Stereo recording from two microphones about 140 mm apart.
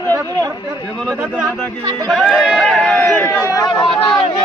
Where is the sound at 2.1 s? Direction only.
Centre (ahead or behind).